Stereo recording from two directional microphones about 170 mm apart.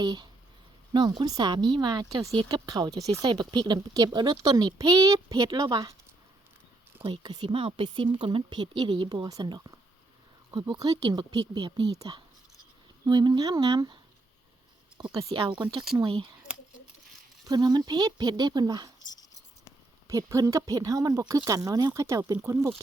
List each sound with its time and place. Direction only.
0.0 s a woman's voice: 25° right (ahead or behind)
7.0 s a woman's voice: 30° right (ahead or behind)
17.4 s a woman's voice: 25° right (ahead or behind)
20.1 s a woman's voice: 20° right (ahead or behind)